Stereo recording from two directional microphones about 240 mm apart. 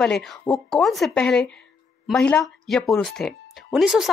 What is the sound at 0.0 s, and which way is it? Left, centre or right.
Speech, centre.